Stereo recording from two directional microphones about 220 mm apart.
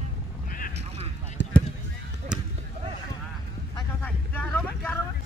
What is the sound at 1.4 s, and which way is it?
Basketball bounce, 55° left (ahead or behind).